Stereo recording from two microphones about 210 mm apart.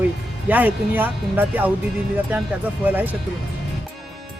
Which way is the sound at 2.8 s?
10° right (ahead or behind).